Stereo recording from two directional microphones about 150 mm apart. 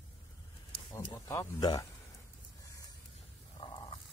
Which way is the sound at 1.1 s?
20° left (ahead or behind).